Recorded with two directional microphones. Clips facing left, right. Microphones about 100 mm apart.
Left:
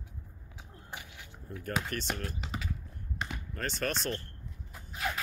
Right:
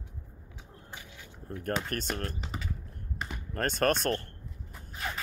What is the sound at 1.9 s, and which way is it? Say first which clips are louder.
Speech: right 2 dB; 50° right (ahead or behind).